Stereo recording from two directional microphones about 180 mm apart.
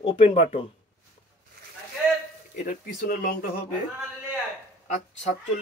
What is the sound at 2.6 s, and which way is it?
Speech, 50° left (ahead or behind).